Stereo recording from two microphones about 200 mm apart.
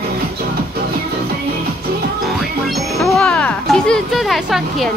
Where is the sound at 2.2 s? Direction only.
Centre (ahead or behind).